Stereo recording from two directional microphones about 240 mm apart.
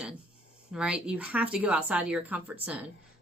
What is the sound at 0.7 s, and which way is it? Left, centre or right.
Speech, centre.